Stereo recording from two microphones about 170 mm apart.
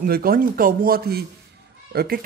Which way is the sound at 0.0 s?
60° right (ahead or behind).